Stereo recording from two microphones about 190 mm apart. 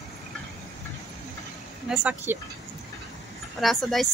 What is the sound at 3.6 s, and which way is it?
Speech, centre (ahead or behind).